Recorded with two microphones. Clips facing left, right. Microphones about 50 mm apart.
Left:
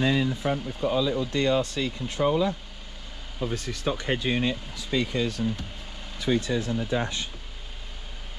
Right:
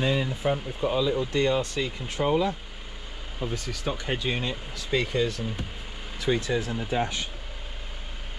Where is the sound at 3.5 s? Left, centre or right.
Left.